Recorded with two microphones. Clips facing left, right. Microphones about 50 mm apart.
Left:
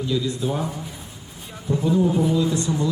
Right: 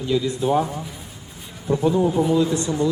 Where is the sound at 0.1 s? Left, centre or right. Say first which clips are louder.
Right 6 dB; right.